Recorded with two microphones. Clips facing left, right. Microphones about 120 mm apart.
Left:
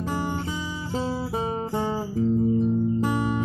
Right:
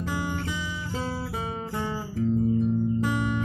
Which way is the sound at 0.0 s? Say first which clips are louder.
Left 2 dB; 30° left (ahead or behind).